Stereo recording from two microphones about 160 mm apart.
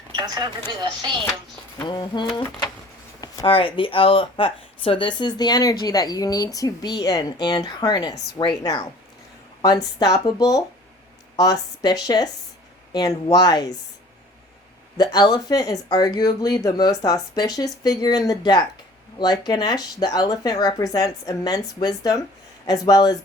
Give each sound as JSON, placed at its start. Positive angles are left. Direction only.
{"t": 0.2, "sound": "speech", "side_deg": -25}
{"t": 1.8, "sound": "speech", "side_deg": 30}
{"t": 3.4, "sound": "speech", "side_deg": 35}
{"t": 14.9, "sound": "speech", "side_deg": 25}